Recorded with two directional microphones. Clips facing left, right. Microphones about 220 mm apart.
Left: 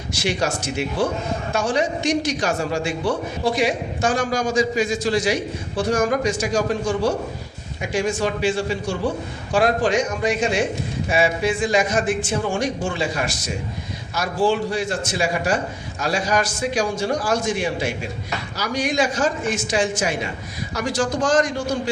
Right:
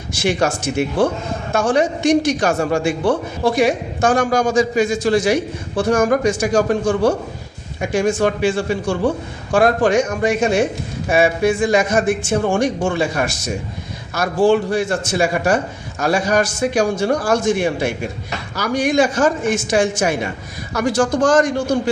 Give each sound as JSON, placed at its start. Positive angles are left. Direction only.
{"t": 0.2, "sound": "a man's voice", "side_deg": -50}